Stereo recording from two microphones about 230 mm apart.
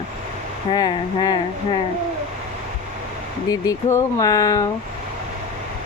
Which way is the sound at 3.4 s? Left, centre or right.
Centre.